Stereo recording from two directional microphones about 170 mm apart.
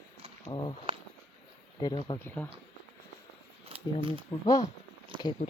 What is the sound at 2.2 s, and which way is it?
Speech, 10° left (ahead or behind).